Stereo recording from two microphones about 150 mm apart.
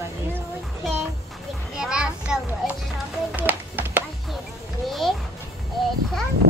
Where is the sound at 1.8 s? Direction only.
5° right (ahead or behind).